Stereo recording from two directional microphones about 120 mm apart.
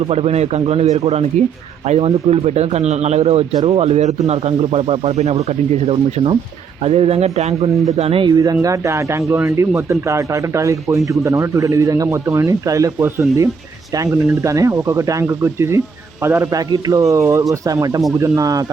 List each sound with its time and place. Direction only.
0.1 s speech: 60° right (ahead or behind)
8.3 s speech: 30° right (ahead or behind)